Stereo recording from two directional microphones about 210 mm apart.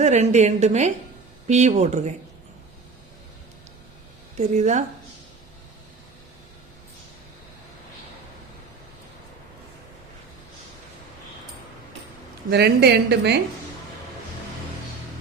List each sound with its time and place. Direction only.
0.0 s a woman's voice: 30° right (ahead or behind)
4.4 s a woman's voice: 35° right (ahead or behind)
12.5 s a woman's voice: 50° right (ahead or behind)